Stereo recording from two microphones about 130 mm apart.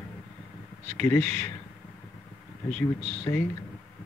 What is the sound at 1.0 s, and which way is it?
Speech, 20° left (ahead or behind).